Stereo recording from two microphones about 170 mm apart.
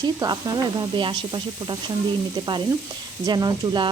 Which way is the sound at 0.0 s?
25° right (ahead or behind).